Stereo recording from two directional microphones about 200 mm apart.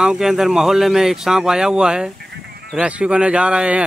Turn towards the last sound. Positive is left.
turn(degrees=-5)  # may be behind; listen again after turning